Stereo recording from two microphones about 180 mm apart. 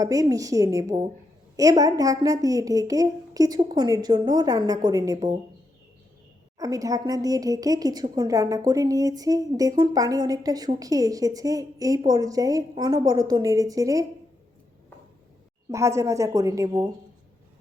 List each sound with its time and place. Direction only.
0.0 s a woman's voice: 20° right (ahead or behind)
6.6 s a woman's voice: 20° right (ahead or behind)
15.7 s a woman's voice: 15° right (ahead or behind)